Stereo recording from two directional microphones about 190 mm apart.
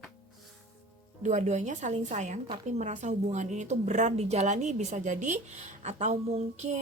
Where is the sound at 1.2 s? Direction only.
40° right (ahead or behind).